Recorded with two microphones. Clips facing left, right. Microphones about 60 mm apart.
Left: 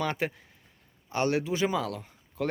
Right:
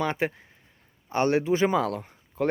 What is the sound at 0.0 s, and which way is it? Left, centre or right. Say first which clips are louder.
Speech: right 3 dB; right.